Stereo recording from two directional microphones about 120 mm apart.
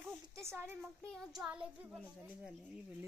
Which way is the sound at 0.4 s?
20° right (ahead or behind).